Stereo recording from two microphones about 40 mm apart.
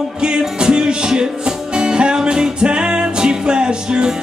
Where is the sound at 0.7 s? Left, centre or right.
Right.